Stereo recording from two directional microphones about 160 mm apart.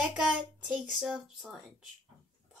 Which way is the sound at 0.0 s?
5° right (ahead or behind).